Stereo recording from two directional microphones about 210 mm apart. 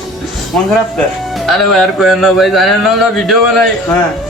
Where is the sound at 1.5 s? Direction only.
Centre (ahead or behind).